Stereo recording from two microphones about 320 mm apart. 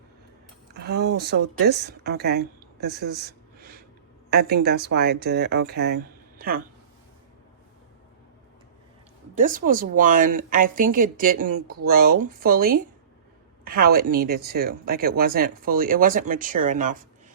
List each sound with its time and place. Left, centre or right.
0.7 s speech: right
9.3 s speech: right